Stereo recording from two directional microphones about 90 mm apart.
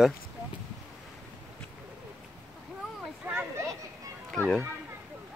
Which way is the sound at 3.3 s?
25° right (ahead or behind).